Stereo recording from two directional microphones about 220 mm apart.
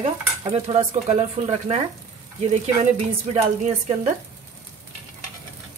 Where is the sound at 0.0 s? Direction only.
25° right (ahead or behind).